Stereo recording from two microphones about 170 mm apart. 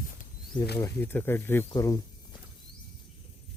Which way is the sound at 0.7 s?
15° left (ahead or behind).